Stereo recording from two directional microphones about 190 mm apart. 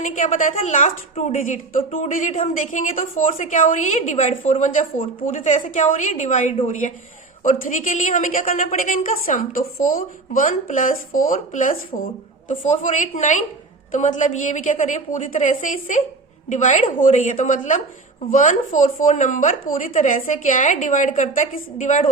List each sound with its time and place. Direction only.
0.0 s a woman's voice: 40° left (ahead or behind)